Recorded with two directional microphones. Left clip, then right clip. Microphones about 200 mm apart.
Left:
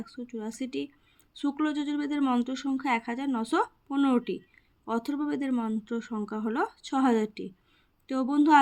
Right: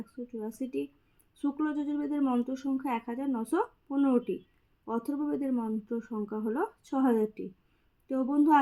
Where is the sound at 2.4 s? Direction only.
5° left (ahead or behind).